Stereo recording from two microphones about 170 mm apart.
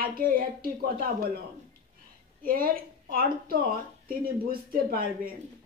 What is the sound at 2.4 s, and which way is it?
Speech, 60° right (ahead or behind).